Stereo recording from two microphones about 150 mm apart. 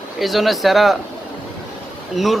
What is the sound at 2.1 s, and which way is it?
Speech, centre (ahead or behind).